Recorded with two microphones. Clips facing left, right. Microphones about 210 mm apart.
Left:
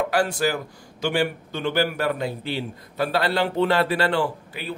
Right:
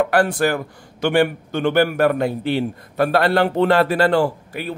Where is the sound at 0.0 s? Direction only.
55° right (ahead or behind).